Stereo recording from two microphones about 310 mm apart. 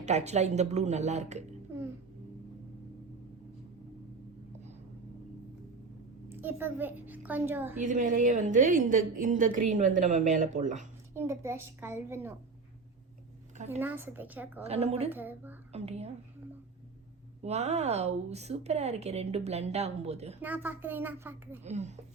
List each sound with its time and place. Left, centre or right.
0.0 s a woman's voice: right
1.7 s a sound: centre
6.2 s a woman's voice: centre
7.8 s a woman's voice: right
11.1 s a woman's voice: centre
13.7 s speech: centre
14.6 s a woman's voice: centre
15.1 s speech: centre
15.7 s a woman's voice: centre
17.4 s a woman's voice: right
20.4 s speech: centre
21.6 s a woman's voice: right